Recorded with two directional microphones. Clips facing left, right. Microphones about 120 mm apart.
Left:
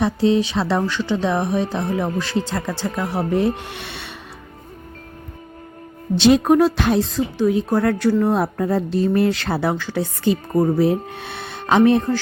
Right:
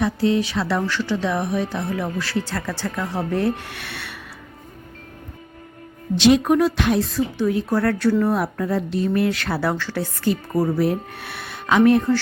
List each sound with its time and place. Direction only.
0.0 s speech: 25° left (ahead or behind)
6.1 s speech: 35° left (ahead or behind)
7.3 s speech: 20° left (ahead or behind)
8.2 s speech: 25° left (ahead or behind)
9.6 s speech: 15° left (ahead or behind)